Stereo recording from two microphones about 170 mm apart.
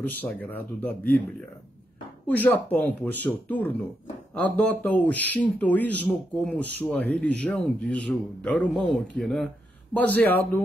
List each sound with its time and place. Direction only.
0.0 s speech: 10° left (ahead or behind)
2.2 s speech: 10° left (ahead or behind)